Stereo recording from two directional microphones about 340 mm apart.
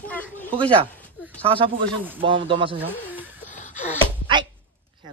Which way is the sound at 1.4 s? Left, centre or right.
Centre.